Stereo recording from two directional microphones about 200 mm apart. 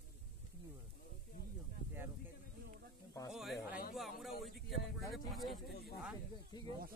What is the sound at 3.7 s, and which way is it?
Speech, 45° left (ahead or behind).